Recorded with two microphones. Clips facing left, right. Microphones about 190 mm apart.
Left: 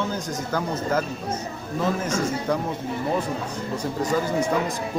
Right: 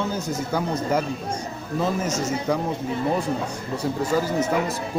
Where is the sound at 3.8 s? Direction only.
10° right (ahead or behind).